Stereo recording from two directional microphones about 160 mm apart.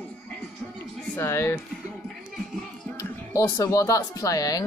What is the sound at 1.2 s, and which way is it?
Speech, 15° left (ahead or behind).